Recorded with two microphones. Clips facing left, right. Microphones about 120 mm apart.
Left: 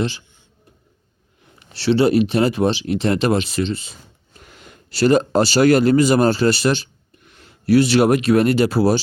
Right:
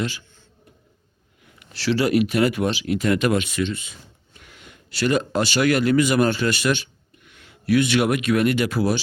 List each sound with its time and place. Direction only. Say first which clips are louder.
1.5 s speech: left 5 dB; 30° left (ahead or behind)